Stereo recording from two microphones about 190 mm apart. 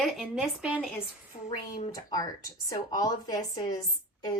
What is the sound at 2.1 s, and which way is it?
Speech, 20° left (ahead or behind).